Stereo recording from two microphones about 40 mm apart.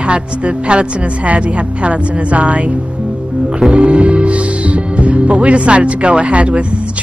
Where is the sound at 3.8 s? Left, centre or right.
Right.